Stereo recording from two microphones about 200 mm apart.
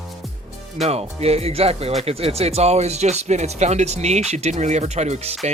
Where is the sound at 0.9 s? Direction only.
30° right (ahead or behind).